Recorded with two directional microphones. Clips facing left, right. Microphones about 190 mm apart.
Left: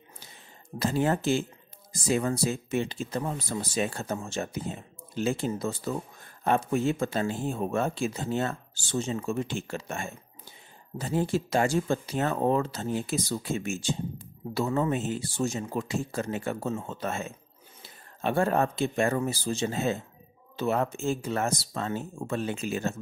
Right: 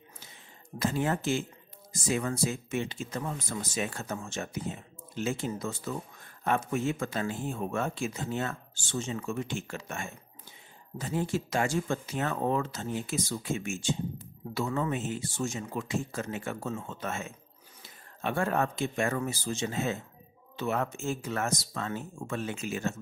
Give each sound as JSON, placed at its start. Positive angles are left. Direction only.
{"t": 0.7, "sound": "speech", "side_deg": 35}